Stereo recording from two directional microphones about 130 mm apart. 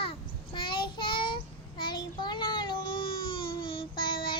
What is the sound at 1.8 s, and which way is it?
Child singing, 35° left (ahead or behind).